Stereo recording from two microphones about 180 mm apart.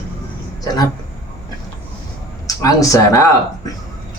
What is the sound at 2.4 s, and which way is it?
Speech, 20° left (ahead or behind).